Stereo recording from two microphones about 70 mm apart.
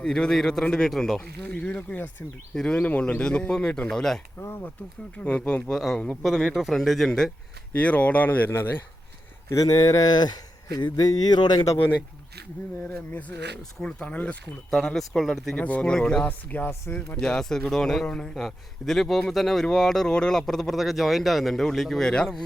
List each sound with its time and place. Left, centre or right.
0.0 s speech: centre
1.5 s speech: centre
2.8 s speech: centre
5.1 s speech: centre
5.7 s speech: centre
7.7 s a man's voice: centre
9.6 s speech: left
13.1 s speech: left
14.7 s speech: centre
15.5 s speech: centre
16.2 s speech: left
17.2 s speech: centre
18.3 s speech: centre